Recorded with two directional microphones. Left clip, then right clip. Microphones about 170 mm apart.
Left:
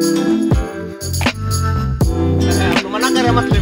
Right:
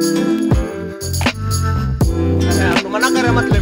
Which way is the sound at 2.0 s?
Centre (ahead or behind).